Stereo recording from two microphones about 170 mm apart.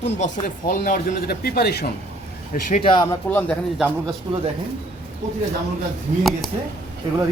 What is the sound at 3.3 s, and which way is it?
Speech, 10° left (ahead or behind).